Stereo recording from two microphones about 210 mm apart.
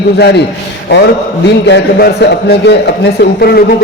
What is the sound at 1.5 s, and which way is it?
A man's voice, 55° left (ahead or behind).